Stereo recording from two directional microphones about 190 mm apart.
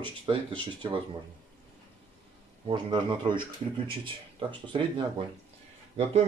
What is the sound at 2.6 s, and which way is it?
Speech, 25° right (ahead or behind).